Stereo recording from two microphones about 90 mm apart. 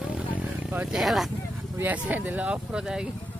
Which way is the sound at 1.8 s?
20° right (ahead or behind).